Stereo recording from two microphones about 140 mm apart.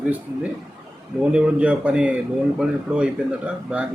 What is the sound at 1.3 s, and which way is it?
A man's voice, 10° right (ahead or behind).